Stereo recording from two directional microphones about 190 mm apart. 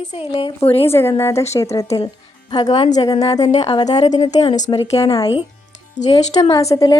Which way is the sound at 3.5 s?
35° left (ahead or behind).